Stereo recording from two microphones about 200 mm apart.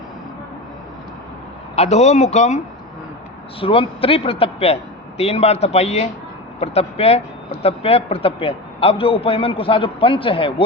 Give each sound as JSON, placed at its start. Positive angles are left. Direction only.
{"t": 1.7, "sound": "speech", "side_deg": 35}
{"t": 3.6, "sound": "a man's voice", "side_deg": 25}